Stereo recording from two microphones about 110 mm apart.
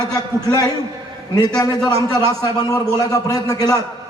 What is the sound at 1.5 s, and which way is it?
A man's voice, 35° left (ahead or behind).